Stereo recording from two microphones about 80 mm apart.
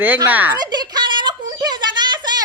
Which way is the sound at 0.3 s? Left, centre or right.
Right.